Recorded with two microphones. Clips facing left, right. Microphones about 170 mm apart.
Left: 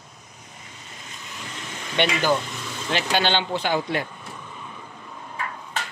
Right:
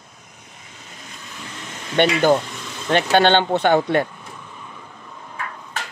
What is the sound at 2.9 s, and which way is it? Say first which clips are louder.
Speech: right 8 dB; 55° right (ahead or behind).